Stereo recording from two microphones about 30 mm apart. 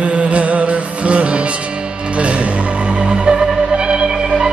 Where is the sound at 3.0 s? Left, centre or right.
Right.